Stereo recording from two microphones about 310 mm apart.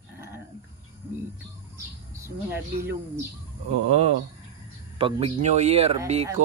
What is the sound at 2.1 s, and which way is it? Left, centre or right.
Speech, centre.